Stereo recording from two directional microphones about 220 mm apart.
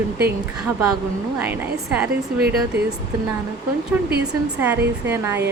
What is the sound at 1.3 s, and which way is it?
A woman's voice, 10° right (ahead or behind).